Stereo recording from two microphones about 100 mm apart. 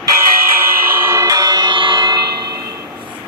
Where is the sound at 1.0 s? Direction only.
30° right (ahead or behind).